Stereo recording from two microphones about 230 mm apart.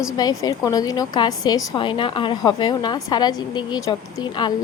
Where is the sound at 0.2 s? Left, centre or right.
Centre.